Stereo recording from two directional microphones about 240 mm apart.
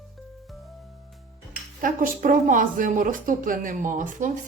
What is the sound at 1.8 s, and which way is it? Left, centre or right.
A woman's voice, right.